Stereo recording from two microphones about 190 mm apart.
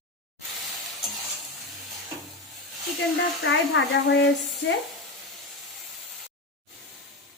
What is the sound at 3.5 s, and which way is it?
Speech, 70° left (ahead or behind).